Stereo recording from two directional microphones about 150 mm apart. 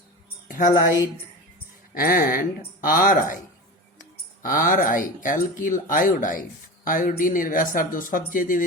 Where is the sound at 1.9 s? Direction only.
75° left (ahead or behind).